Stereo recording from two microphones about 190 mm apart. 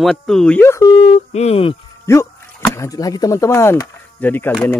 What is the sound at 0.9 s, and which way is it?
Speech, 35° left (ahead or behind).